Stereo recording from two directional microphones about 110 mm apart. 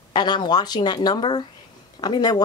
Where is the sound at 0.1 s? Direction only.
45° left (ahead or behind).